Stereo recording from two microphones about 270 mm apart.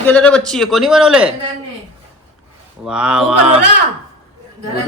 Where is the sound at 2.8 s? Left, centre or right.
Centre.